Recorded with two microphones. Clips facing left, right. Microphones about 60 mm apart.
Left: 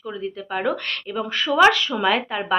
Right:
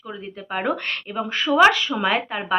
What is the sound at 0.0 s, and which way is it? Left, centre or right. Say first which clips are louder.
Speech: left 4 dB; centre.